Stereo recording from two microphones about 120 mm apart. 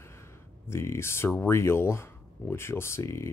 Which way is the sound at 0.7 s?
20° left (ahead or behind).